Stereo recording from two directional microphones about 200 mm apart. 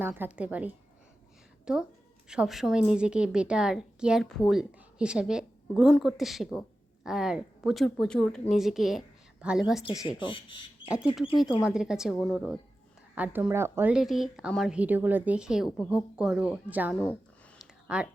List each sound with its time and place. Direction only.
0.0 s a woman's voice: 10° right (ahead or behind)
9.8 s speech: 20° left (ahead or behind)
10.8 s a woman's voice: 5° right (ahead or behind)
17.6 s a sound: 5° right (ahead or behind)